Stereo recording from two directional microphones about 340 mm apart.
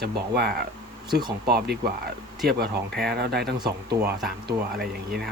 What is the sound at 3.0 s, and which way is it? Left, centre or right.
Speech, right.